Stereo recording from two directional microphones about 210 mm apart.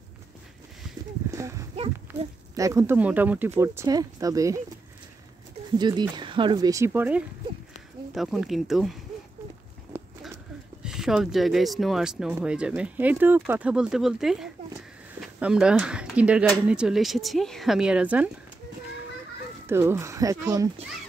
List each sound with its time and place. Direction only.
1.3 s horse: 15° right (ahead or behind)
2.5 s speech: 15° right (ahead or behind)
5.8 s speech: 20° right (ahead or behind); by 8.9 s centre (ahead or behind)
9.9 s a sound: 10° right (ahead or behind)
10.8 s speech: centre (ahead or behind)
19.6 s speech: 10° right (ahead or behind)